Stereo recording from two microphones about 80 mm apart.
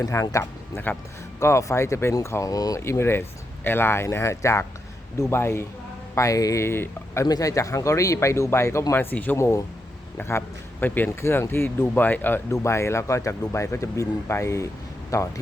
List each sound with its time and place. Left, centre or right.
0.0 s speech: left
0.9 s speech: left
1.4 s speech: left
2.8 s speech: left
6.1 s speech: left
7.3 s speech: left
9.4 s speech: left
10.2 s speech: left
12.5 s speech: left